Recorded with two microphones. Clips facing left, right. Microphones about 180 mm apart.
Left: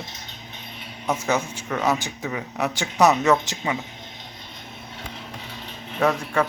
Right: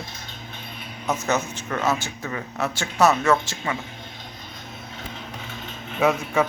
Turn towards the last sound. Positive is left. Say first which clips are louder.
# right 1 dB
turn(degrees=-5)  # may be behind; listen again after turning